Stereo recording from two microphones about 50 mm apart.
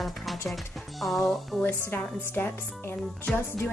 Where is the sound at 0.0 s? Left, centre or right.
Centre.